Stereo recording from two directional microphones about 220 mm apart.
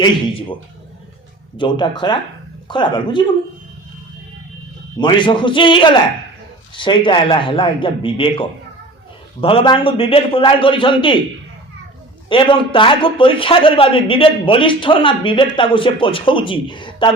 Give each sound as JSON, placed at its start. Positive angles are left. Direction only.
{"t": 0.0, "sound": "a man's voice", "side_deg": 20}
{"t": 1.5, "sound": "a man's voice", "side_deg": 20}
{"t": 4.9, "sound": "a man's voice", "side_deg": 20}
{"t": 12.3, "sound": "a man's voice", "side_deg": 25}